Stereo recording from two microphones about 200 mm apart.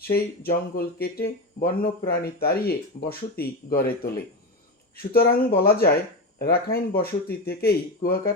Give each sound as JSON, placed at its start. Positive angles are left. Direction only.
{"t": 0.0, "sound": "speech", "side_deg": 50}
{"t": 5.1, "sound": "speech", "side_deg": 50}